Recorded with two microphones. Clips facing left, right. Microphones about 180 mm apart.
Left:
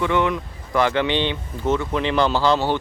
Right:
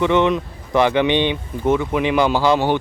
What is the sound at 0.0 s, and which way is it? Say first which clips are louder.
Speech: right 4 dB; 20° right (ahead or behind).